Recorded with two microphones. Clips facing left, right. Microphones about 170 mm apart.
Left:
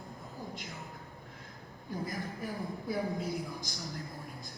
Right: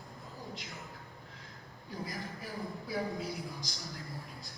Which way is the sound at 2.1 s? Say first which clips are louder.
Left 4 dB; 50° left (ahead or behind).